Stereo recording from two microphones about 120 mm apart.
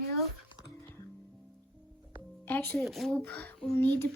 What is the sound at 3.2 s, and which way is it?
Speech, 15° left (ahead or behind).